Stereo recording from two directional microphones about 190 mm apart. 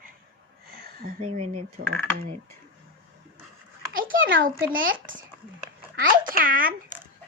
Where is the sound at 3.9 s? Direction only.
45° right (ahead or behind).